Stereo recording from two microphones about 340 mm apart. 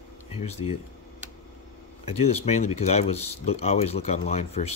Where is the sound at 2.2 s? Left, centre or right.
Centre.